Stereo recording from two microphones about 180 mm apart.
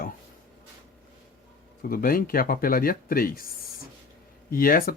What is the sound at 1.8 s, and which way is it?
Speech, 55° left (ahead or behind).